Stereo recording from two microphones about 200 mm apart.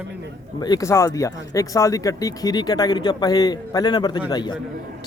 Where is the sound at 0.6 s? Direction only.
20° left (ahead or behind).